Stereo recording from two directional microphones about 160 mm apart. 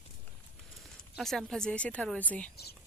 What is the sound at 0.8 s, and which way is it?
Speech, centre (ahead or behind).